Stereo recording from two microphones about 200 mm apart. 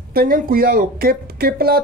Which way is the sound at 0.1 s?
45° right (ahead or behind).